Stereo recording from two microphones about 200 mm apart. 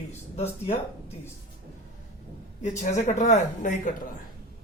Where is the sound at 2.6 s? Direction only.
35° left (ahead or behind).